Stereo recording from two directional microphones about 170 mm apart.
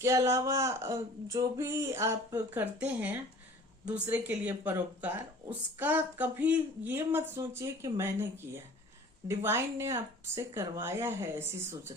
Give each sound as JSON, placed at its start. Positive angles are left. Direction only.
{"t": 0.0, "sound": "speech", "side_deg": -15}